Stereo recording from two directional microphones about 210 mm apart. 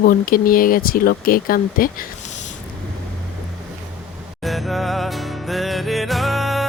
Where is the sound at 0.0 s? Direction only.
45° left (ahead or behind).